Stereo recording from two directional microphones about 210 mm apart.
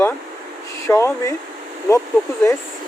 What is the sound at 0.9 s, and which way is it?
Speech, 15° left (ahead or behind).